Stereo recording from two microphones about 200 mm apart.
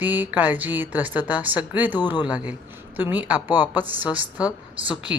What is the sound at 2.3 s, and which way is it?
A woman's voice, 5° right (ahead or behind).